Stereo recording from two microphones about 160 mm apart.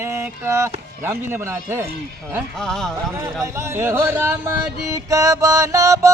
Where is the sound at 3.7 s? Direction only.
15° right (ahead or behind).